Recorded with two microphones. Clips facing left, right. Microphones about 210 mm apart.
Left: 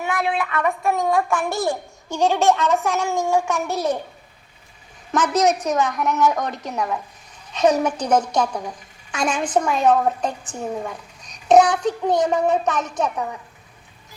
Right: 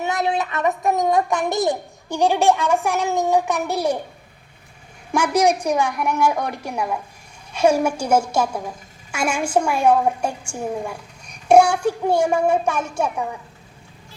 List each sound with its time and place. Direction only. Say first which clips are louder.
0.0 s a woman's voice: right 1 dB; 20° right (ahead or behind)
5.1 s a woman's voice: right 1 dB; 10° right (ahead or behind)